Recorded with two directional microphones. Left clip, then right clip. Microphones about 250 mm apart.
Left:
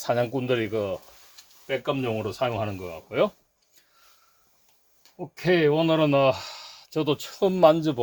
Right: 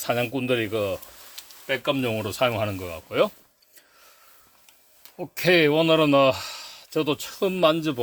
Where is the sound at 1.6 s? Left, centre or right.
Right.